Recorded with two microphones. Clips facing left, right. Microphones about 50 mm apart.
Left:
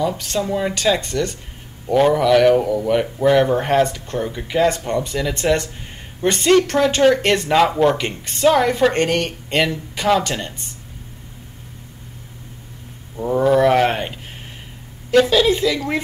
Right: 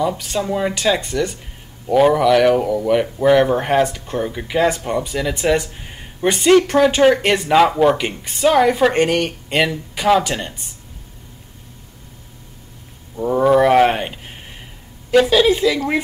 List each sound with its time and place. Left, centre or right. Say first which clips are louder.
0.0 s speech: right 1 dB; centre
13.1 s speech: right 2 dB; centre